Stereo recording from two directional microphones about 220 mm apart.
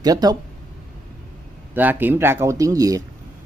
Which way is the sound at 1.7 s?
10° right (ahead or behind).